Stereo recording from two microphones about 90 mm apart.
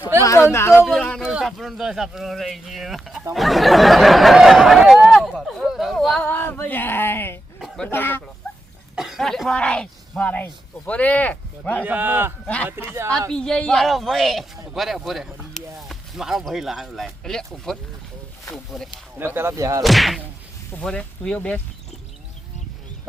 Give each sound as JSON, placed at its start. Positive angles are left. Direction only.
{"t": 0.2, "sound": "a sound", "side_deg": 30}
{"t": 1.2, "sound": "speech", "side_deg": -5}
{"t": 6.2, "sound": "a sound", "side_deg": 20}
{"t": 9.0, "sound": "speech", "side_deg": 0}
{"t": 11.9, "sound": "speech", "side_deg": -20}
{"t": 13.3, "sound": "speech", "side_deg": 10}
{"t": 15.9, "sound": "a sound", "side_deg": -5}
{"t": 16.4, "sound": "speech", "side_deg": 0}
{"t": 19.2, "sound": "speech", "side_deg": -25}
{"t": 19.8, "sound": "speech", "side_deg": 0}
{"t": 20.7, "sound": "speech", "side_deg": 15}